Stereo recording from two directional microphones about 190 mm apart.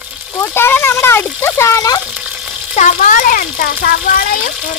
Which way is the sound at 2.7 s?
40° left (ahead or behind).